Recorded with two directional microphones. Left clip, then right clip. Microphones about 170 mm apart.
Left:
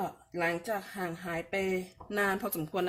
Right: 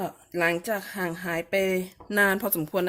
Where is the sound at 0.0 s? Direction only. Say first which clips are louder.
Right 6 dB; 60° right (ahead or behind).